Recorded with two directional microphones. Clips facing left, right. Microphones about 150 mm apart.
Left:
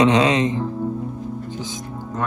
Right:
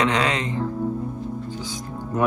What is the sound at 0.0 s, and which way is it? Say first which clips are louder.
Speech: left 6 dB; 20° left (ahead or behind).